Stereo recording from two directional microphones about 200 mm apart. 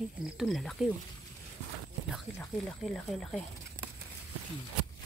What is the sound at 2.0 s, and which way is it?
Speech, centre (ahead or behind).